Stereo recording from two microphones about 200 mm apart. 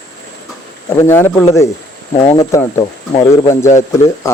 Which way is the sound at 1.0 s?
15° left (ahead or behind).